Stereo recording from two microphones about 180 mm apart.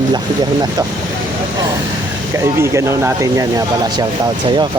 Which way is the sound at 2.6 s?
15° right (ahead or behind).